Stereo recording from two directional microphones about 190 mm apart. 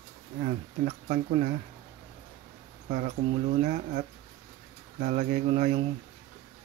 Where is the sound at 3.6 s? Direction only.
40° right (ahead or behind).